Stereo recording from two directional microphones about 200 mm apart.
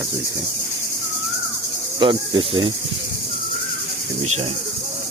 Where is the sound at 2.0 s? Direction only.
25° right (ahead or behind).